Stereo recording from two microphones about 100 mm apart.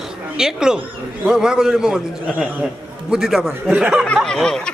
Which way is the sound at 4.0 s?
10° left (ahead or behind).